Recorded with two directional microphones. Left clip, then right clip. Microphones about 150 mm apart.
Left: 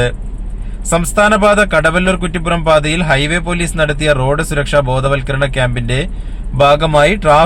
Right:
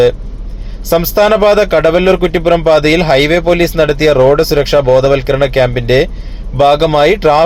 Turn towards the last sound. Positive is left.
turn(degrees=-30)  # may be behind; listen again after turning